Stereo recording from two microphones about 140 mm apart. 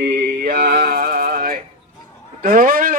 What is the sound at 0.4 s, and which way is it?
Mantra, 90° right.